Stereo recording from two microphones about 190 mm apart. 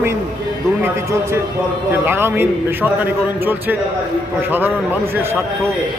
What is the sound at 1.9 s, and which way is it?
A man's voice, 10° right (ahead or behind).